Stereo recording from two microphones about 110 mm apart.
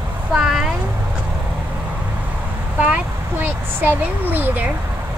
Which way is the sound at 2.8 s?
15° right (ahead or behind).